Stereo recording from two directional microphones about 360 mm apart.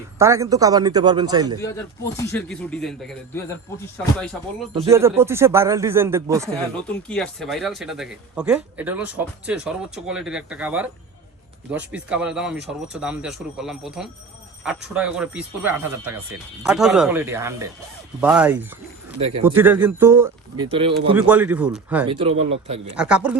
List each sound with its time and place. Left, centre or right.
0.2 s speech: centre
2.1 s speech: centre
4.7 s speech: centre
22.1 s speech: centre
23.0 s speech: centre